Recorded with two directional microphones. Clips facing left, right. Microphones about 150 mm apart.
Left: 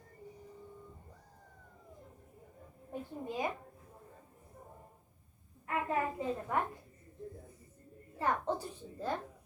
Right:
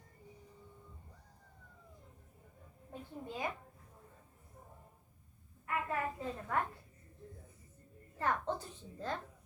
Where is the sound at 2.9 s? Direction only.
15° left (ahead or behind).